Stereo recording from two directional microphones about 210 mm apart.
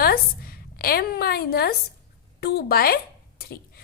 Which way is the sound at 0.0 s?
45° left (ahead or behind).